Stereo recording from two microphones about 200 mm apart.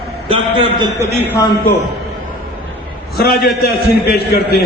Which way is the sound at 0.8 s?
15° right (ahead or behind).